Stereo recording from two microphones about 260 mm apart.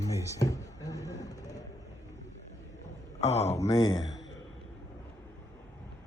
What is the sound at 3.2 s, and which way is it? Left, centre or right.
Speech, left.